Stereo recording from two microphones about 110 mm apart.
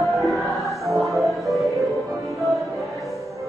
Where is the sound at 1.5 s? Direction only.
Centre (ahead or behind).